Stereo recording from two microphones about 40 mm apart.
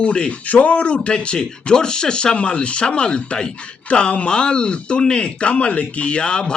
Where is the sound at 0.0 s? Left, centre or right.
Left.